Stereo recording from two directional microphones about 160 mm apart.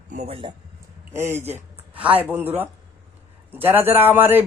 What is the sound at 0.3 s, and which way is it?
Speech, 35° right (ahead or behind).